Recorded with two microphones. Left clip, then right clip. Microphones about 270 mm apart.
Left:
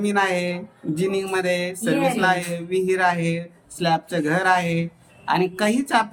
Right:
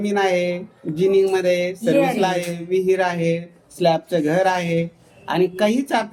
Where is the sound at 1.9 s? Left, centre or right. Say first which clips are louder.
Right 3 dB; centre.